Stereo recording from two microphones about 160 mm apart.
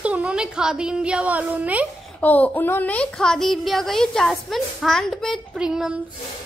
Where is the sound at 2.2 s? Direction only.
10° left (ahead or behind).